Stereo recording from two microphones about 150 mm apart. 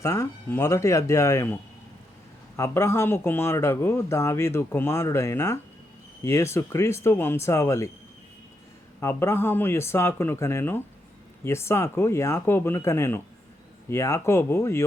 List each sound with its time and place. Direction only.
0.0 s speech: 20° left (ahead or behind)
2.6 s speech: 20° left (ahead or behind)
9.0 s speech: 15° left (ahead or behind)